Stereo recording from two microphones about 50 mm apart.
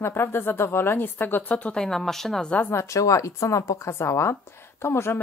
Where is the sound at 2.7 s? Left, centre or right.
Left.